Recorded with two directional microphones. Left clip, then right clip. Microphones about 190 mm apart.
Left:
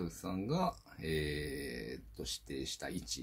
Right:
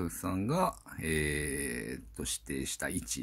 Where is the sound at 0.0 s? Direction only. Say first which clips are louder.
Right 5 dB; 45° right (ahead or behind).